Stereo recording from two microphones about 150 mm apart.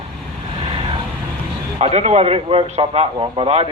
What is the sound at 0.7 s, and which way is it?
Vehicle, 35° right (ahead or behind).